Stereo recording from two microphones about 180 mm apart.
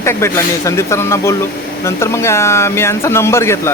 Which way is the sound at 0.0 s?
15° left (ahead or behind).